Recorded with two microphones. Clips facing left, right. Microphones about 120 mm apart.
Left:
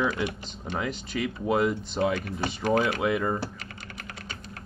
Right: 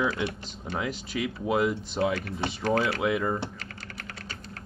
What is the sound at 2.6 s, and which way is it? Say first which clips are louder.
Speech: left 1 dB; 15° left (ahead or behind).